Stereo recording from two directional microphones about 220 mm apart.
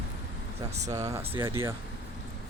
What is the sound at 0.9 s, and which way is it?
Speech, 15° right (ahead or behind).